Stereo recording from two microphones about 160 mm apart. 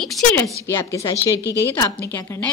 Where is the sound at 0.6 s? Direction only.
15° left (ahead or behind).